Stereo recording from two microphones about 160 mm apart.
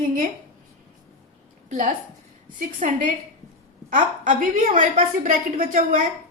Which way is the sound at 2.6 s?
55° right (ahead or behind).